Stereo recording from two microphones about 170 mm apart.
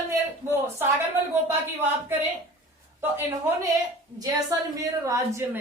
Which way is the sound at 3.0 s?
15° right (ahead or behind).